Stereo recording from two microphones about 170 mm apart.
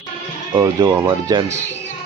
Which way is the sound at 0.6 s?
20° right (ahead or behind).